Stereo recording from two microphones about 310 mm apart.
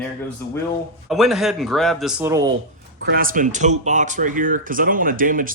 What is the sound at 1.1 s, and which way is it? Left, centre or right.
A man's voice, centre.